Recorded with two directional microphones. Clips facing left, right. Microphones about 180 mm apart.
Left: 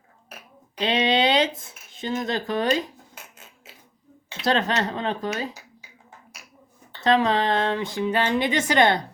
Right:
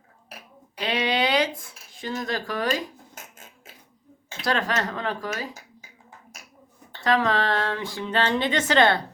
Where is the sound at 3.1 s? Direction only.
50° right (ahead or behind).